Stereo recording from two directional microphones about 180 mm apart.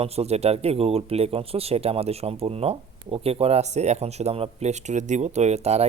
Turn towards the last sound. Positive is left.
turn(degrees=-35)  # may be behind; listen again after turning